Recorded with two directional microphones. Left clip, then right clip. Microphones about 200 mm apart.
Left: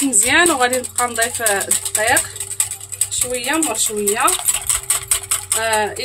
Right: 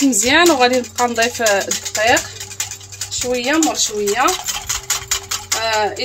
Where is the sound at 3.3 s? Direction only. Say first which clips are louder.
Right 4 dB; 20° right (ahead or behind).